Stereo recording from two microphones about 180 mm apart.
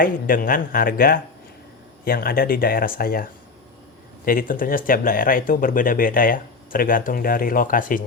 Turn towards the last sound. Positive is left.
turn(degrees=50)  # may be behind; listen again after turning